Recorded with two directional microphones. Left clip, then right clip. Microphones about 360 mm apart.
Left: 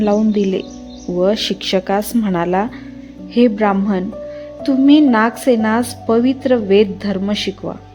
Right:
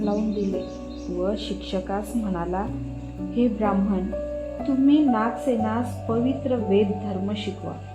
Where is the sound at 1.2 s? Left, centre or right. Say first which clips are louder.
Left 12 dB; left.